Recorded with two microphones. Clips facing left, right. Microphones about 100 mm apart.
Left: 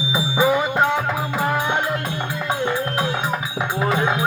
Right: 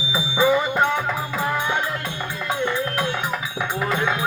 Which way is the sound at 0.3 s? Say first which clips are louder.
Even; 15° left (ahead or behind).